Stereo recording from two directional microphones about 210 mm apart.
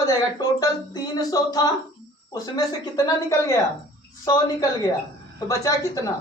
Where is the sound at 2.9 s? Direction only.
15° left (ahead or behind).